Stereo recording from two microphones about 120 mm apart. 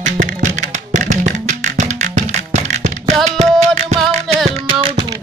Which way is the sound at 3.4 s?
65° right (ahead or behind).